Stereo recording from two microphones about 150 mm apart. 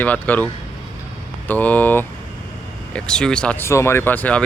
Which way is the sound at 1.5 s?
10° left (ahead or behind).